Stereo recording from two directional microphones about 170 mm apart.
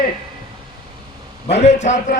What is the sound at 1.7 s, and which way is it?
Speech, 45° left (ahead or behind).